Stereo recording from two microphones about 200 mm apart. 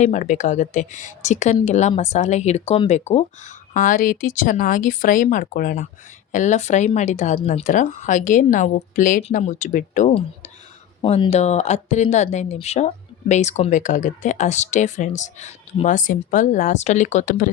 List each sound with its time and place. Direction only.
0.0 s speech: 35° left (ahead or behind)